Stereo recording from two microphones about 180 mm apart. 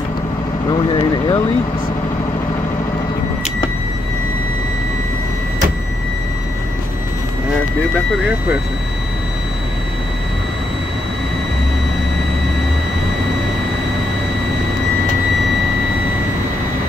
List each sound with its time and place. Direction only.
0.7 s speech: 25° left (ahead or behind)